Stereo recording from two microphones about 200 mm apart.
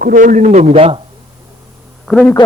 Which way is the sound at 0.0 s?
45° right (ahead or behind).